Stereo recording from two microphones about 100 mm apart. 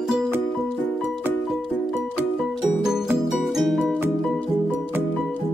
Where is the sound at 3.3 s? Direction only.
Centre (ahead or behind).